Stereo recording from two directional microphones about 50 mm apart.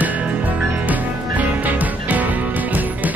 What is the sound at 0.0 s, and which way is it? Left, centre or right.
Music, right.